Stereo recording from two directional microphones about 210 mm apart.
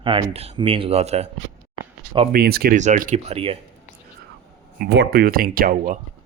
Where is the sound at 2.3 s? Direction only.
50° right (ahead or behind).